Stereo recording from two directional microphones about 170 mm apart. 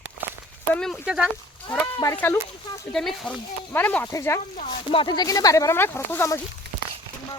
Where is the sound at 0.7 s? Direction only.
5° left (ahead or behind).